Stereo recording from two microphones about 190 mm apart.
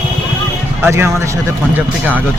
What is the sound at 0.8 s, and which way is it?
Speech, 15° right (ahead or behind).